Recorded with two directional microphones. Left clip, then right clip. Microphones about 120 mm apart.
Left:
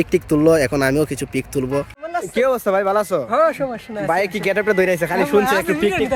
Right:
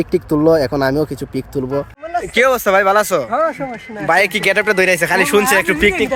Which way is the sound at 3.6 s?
40° left (ahead or behind).